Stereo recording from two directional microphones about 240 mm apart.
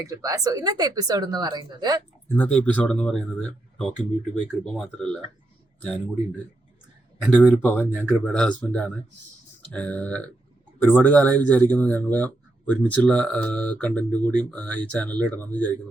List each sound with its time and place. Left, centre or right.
0.0 s speech: centre
2.3 s speech: centre